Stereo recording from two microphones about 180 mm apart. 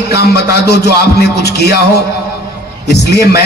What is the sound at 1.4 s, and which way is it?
Speech, 65° left (ahead or behind).